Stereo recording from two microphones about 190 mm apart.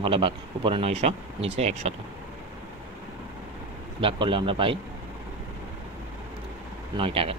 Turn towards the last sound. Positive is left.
turn(degrees=-30)  # may be behind; listen again after turning